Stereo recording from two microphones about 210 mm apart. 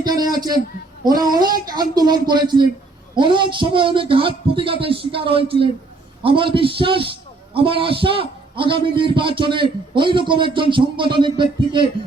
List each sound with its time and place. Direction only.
0.0 s a man's voice: 20° right (ahead or behind)